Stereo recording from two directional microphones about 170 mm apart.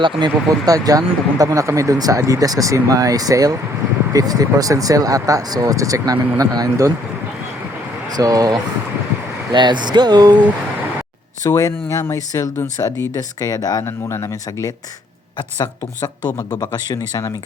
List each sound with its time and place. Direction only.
0.0 s speech: 25° right (ahead or behind)
8.1 s speech: 20° right (ahead or behind)
11.4 s speech: 20° left (ahead or behind)